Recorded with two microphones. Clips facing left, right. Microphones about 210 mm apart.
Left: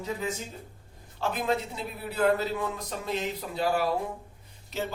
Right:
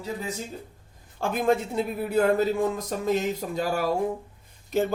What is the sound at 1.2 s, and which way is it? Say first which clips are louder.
Speech: right 5 dB; 50° right (ahead or behind).